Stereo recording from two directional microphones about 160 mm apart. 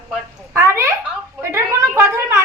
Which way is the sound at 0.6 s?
15° right (ahead or behind).